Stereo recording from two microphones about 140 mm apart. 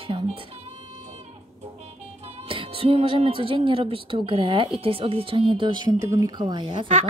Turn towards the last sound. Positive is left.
turn(degrees=-35)  # may be behind; listen again after turning